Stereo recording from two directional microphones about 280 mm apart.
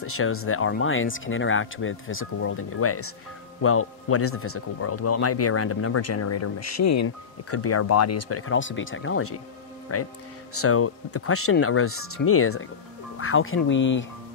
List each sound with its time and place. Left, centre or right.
0.0 s speech: left
7.5 s speech: left